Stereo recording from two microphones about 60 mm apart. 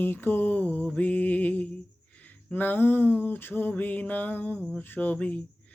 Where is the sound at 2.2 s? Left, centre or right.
Left.